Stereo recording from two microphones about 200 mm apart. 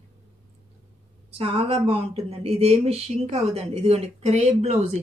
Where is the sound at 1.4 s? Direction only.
30° right (ahead or behind).